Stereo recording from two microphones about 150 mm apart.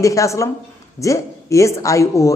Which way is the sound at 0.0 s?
20° left (ahead or behind).